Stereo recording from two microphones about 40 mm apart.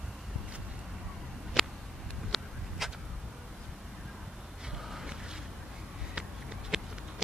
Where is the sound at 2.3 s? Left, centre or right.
Centre.